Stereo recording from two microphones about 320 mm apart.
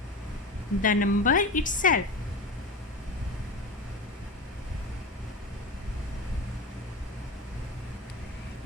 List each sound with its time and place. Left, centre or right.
0.8 s a woman's voice: left